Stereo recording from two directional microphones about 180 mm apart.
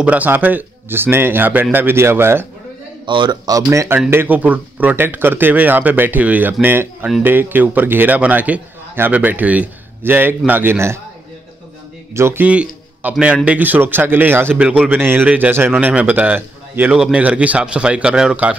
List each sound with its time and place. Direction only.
0.0 s a man's voice: 10° right (ahead or behind)
3.1 s a man's voice: 25° right (ahead or behind)
12.1 s a man's voice: 15° right (ahead or behind)